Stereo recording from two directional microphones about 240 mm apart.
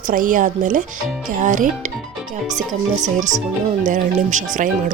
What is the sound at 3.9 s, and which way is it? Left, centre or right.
Speech, right.